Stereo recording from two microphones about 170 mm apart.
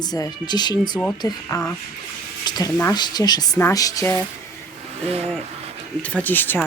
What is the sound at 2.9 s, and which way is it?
A woman's voice, 25° left (ahead or behind).